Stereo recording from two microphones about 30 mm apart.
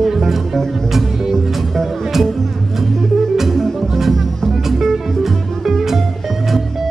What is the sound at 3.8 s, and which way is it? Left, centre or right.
Music, centre.